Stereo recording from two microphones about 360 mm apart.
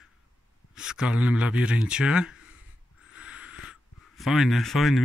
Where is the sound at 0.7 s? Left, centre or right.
Centre.